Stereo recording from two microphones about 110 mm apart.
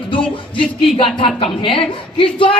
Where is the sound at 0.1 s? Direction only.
50° left (ahead or behind).